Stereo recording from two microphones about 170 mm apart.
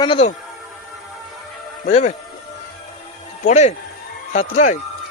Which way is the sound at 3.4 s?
40° left (ahead or behind).